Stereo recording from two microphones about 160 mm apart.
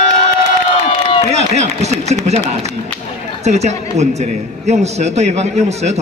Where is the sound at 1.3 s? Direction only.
45° right (ahead or behind).